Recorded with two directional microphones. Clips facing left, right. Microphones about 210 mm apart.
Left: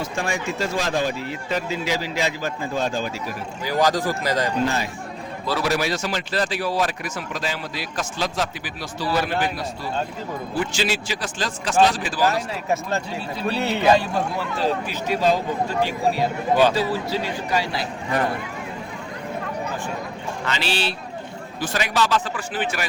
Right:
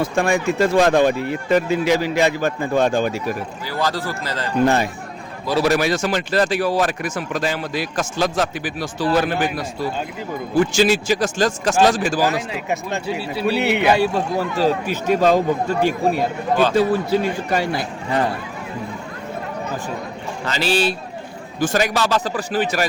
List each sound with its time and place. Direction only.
0.0 s speech: 60° right (ahead or behind)
3.7 s speech: 15° left (ahead or behind)
4.6 s speech: 60° right (ahead or behind)
12.3 s speech: 15° right (ahead or behind)
14.3 s speech: 45° right (ahead or behind)
16.7 s speech: 50° right (ahead or behind)
20.4 s speech: 40° right (ahead or behind)